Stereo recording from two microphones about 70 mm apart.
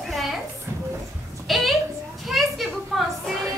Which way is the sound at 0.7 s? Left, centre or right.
Right.